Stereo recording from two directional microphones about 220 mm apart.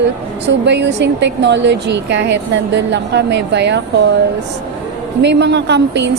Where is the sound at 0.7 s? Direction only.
50° right (ahead or behind).